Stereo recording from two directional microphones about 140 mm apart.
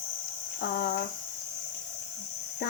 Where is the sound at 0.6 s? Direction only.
90° left.